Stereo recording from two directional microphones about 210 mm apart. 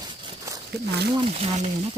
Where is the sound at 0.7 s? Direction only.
50° right (ahead or behind).